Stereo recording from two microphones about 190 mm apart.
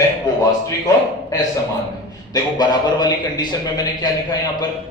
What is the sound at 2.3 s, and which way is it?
A man's voice, 20° left (ahead or behind).